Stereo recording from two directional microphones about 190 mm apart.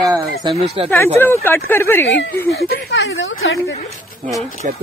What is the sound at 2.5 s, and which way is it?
Speech, 55° left (ahead or behind).